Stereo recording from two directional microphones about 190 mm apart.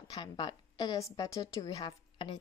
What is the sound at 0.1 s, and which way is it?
A woman's voice, 25° left (ahead or behind).